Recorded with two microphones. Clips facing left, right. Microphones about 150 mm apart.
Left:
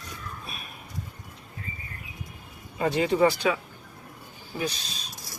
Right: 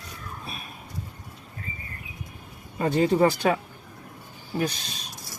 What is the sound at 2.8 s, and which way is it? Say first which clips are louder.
Speech: right 2 dB; 40° right (ahead or behind).